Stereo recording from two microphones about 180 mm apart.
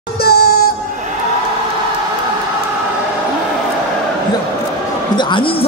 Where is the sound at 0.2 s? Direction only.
60° left (ahead or behind).